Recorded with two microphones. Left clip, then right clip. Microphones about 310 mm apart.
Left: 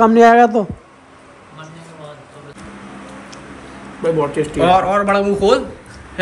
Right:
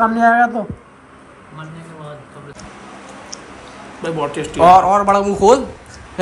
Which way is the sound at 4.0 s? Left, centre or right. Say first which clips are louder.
Left 4 dB; centre.